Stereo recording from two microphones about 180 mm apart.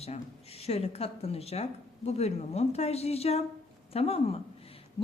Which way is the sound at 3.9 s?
35° left (ahead or behind).